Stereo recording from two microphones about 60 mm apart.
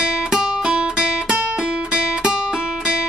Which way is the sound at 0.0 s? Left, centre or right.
Centre.